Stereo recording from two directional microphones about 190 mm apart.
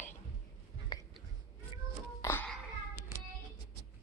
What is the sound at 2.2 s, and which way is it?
Music, 10° left (ahead or behind).